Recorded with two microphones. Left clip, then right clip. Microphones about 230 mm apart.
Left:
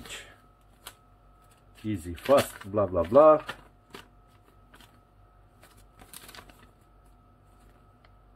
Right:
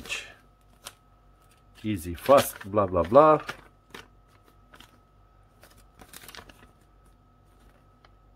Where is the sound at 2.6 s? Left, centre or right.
Right.